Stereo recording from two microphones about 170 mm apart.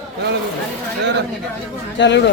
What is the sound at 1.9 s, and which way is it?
Speech, 90° left.